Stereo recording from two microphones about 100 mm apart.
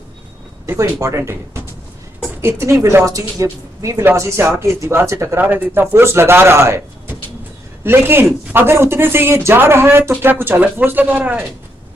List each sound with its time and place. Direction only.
0.7 s speech: 30° right (ahead or behind)
4.0 s speech: 25° right (ahead or behind)
5.4 s speech: 15° right (ahead or behind)